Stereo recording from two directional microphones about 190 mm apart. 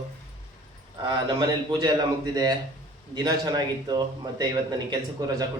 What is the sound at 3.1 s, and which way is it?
A man's voice, 20° right (ahead or behind).